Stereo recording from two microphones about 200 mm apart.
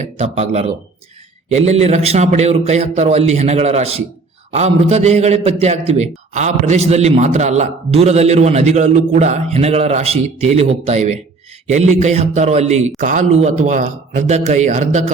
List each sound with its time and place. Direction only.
0.0 s a man's voice: 35° right (ahead or behind)